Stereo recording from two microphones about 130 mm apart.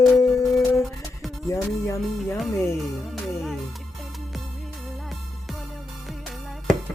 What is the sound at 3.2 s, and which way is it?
Music, centre (ahead or behind).